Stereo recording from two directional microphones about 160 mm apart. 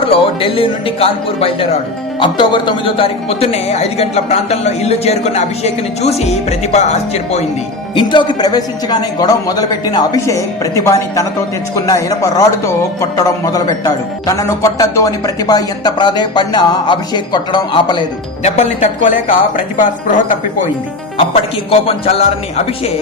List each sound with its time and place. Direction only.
0.1 s speech: 35° left (ahead or behind)
7.9 s a man's voice: 30° left (ahead or behind)
18.4 s a woman's voice: 50° left (ahead or behind)
21.7 s speech: 40° left (ahead or behind)